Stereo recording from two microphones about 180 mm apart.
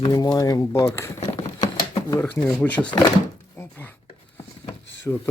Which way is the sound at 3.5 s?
15° left (ahead or behind).